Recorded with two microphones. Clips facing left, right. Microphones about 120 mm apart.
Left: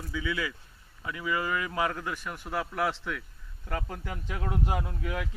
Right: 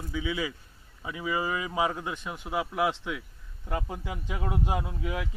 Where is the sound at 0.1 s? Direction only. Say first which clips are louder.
Right 1 dB; 20° right (ahead or behind).